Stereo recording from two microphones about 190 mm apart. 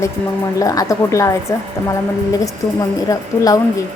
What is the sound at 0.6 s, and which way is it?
Speech, 15° left (ahead or behind).